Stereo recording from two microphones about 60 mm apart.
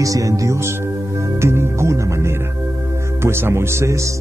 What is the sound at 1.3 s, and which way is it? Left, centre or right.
Speech, right.